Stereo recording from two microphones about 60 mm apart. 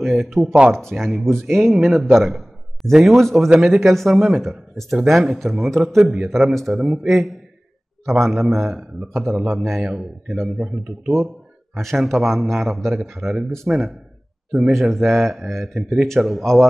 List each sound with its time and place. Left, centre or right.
0.0 s a man's voice: centre
11.7 s a man's voice: centre